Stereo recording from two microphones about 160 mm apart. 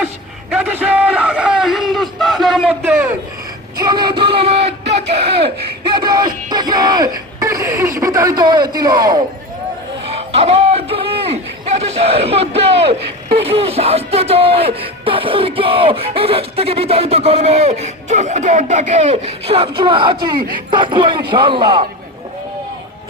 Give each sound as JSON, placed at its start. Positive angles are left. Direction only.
{"t": 0.5, "sound": "speech", "side_deg": -10}
{"t": 3.8, "sound": "speech", "side_deg": -25}
{"t": 5.9, "sound": "speech", "side_deg": -25}
{"t": 10.1, "sound": "a sound", "side_deg": -40}
{"t": 11.8, "sound": "speech", "side_deg": -40}